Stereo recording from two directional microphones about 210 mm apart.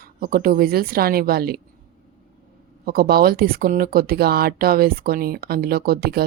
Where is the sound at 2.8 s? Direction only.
45° right (ahead or behind).